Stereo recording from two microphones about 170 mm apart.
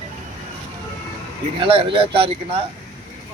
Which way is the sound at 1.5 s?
30° right (ahead or behind).